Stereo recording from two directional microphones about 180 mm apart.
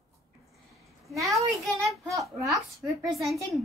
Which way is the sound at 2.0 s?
15° right (ahead or behind).